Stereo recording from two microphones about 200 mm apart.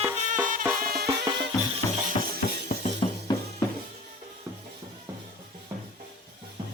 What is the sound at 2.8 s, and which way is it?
Music, 20° left (ahead or behind).